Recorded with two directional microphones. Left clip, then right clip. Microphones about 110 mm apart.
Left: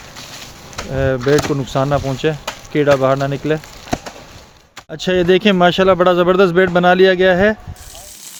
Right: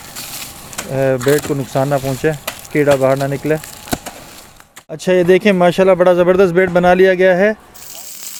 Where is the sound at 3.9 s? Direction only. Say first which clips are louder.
Even; 70° right (ahead or behind).